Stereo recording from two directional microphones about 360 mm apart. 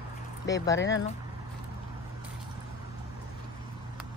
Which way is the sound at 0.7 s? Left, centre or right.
Left.